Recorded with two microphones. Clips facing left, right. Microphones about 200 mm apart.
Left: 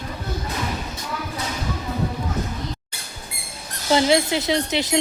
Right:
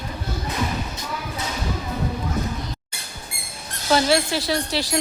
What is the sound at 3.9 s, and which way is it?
Speech, 20° left (ahead or behind).